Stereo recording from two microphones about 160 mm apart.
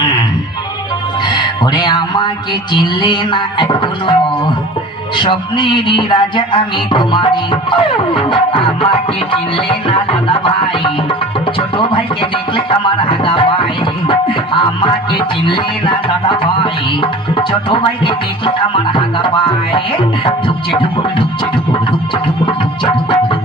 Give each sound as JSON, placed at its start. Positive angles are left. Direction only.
{"t": 1.2, "sound": "speech", "side_deg": 25}
{"t": 2.7, "sound": "music", "side_deg": 30}
{"t": 5.1, "sound": "music", "side_deg": 30}
{"t": 20.2, "sound": "music", "side_deg": 30}
{"t": 22.4, "sound": "music", "side_deg": 30}